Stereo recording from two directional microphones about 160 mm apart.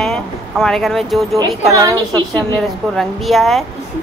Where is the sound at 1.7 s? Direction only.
20° right (ahead or behind).